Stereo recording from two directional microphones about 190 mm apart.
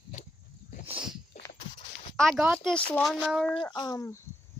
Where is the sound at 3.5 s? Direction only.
25° left (ahead or behind).